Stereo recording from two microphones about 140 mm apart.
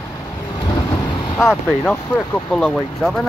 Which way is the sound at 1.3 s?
15° left (ahead or behind).